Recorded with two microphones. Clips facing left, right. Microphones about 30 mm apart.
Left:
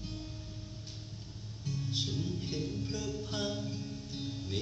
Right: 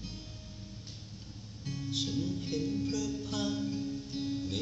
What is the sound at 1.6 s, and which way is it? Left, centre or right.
Music, right.